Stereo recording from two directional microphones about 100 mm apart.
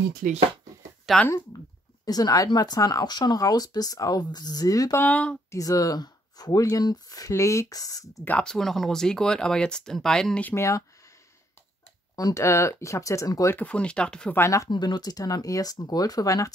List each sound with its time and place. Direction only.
1.1 s speech: 5° right (ahead or behind)
2.0 s speech: 40° left (ahead or behind)
4.9 s speech: 15° left (ahead or behind)
5.5 s speech: 35° left (ahead or behind)
8.2 s speech: 15° left (ahead or behind)
8.5 s speech: 5° left (ahead or behind)
10.5 s speech: 30° left (ahead or behind)
12.2 s speech: 35° left (ahead or behind)
13.6 s speech: 10° left (ahead or behind)
14.3 s speech: 30° left (ahead or behind)
14.7 s speech: 45° left (ahead or behind)